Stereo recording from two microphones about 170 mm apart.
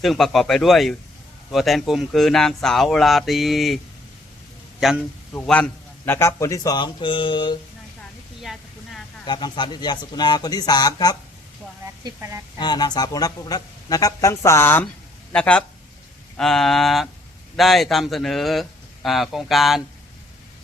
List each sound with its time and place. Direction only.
0.0 s speech: centre (ahead or behind)
4.8 s speech: 5° right (ahead or behind)
5.3 s speech: 10° left (ahead or behind); by 7.5 s 30° left (ahead or behind)
8.4 s a sound: centre (ahead or behind)
9.2 s speech: 25° left (ahead or behind)
12.0 s speech: 20° right (ahead or behind)
12.5 s speech: 25° left (ahead or behind); by 19.8 s centre (ahead or behind)